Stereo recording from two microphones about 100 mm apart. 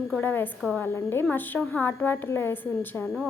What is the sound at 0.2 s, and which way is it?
A woman's voice, 20° left (ahead or behind).